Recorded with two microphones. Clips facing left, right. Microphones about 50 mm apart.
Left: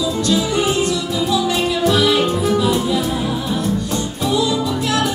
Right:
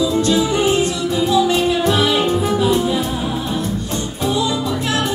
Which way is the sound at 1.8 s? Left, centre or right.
Right.